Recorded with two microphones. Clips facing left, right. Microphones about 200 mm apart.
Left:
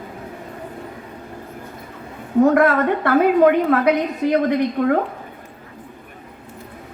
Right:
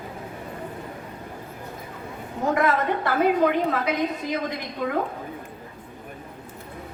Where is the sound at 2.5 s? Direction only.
55° left (ahead or behind).